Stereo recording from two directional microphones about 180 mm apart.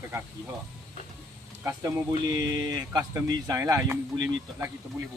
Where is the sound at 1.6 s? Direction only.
20° right (ahead or behind).